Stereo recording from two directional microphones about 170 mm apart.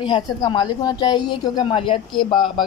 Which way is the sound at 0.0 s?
25° left (ahead or behind).